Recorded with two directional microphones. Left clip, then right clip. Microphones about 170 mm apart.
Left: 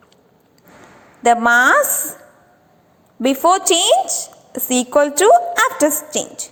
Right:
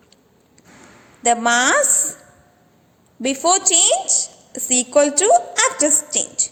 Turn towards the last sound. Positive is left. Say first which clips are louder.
# right 1 dB
turn(degrees=15)  # may be behind; listen again after turning